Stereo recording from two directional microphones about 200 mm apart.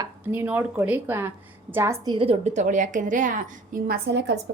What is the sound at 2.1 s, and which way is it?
A woman's voice, 30° right (ahead or behind).